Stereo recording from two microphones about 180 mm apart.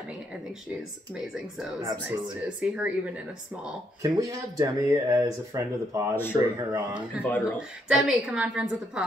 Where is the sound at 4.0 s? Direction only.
20° right (ahead or behind).